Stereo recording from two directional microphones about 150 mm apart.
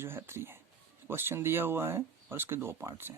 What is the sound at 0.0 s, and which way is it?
Speech, 15° right (ahead or behind).